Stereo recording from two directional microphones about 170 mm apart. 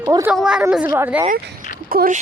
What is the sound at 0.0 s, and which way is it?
Speech, 20° right (ahead or behind).